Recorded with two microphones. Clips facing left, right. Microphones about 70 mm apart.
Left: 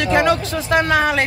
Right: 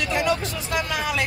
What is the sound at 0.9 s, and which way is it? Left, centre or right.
Speech, left.